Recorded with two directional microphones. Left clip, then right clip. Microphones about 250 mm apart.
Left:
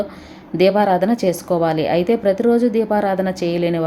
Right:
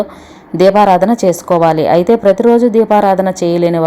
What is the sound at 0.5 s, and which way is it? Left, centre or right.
A woman's voice, centre.